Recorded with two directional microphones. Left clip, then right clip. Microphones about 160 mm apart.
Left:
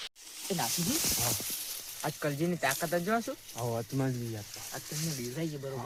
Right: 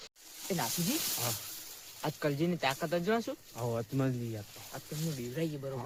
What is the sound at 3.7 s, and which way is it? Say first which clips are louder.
Speech: even; 20° right (ahead or behind).